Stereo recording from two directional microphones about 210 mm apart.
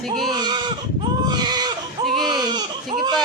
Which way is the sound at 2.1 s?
20° right (ahead or behind).